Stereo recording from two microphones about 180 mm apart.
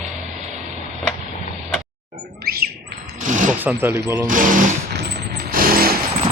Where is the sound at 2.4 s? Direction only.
60° right (ahead or behind).